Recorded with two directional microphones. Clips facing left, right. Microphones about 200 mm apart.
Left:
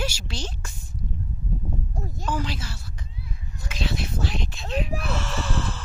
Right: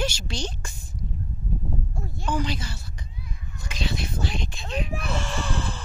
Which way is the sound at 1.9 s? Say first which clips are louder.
Left 2 dB; 40° left (ahead or behind).